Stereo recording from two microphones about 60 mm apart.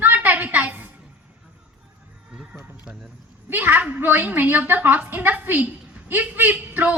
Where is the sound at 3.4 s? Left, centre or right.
Right.